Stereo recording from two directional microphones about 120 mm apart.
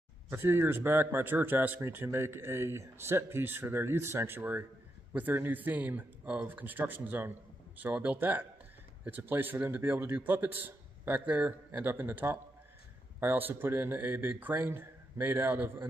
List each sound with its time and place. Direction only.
0.3 s speech: 20° right (ahead or behind)